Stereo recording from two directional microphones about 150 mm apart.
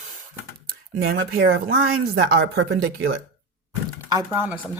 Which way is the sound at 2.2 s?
90° right.